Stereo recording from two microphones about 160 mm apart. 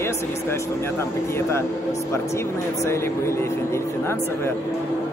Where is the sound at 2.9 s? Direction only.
15° left (ahead or behind).